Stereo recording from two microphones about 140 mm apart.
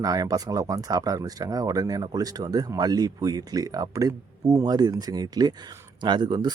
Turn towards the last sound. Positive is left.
turn(degrees=-30)  # may be behind; listen again after turning